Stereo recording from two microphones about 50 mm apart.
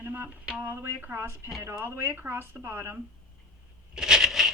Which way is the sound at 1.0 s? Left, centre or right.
Right.